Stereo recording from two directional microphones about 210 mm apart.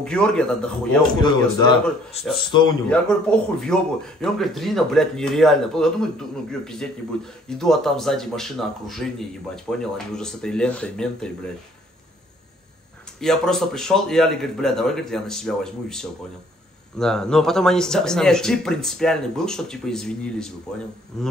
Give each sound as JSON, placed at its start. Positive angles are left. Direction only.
{"t": 0.0, "sound": "speech", "side_deg": 5}
{"t": 1.2, "sound": "a man's voice", "side_deg": 20}
{"t": 2.9, "sound": "speech", "side_deg": 5}
{"t": 13.2, "sound": "speech", "side_deg": 0}